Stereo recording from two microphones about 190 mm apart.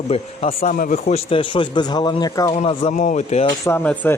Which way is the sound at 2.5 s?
30° left (ahead or behind).